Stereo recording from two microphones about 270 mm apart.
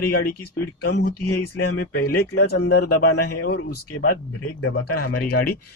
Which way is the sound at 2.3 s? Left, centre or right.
Left.